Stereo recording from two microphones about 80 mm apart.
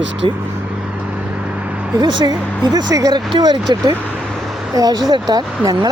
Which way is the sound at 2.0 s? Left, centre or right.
Right.